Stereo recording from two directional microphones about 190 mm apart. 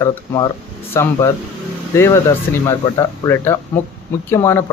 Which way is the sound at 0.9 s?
15° left (ahead or behind).